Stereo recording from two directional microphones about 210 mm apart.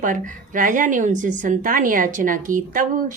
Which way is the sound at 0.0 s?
40° right (ahead or behind).